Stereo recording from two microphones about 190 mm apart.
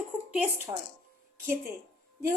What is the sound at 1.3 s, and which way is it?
Speech, 15° right (ahead or behind).